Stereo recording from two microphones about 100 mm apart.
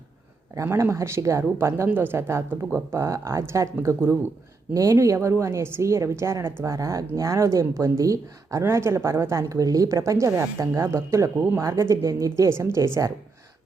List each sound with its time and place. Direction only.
0.5 s a woman's voice: 30° right (ahead or behind)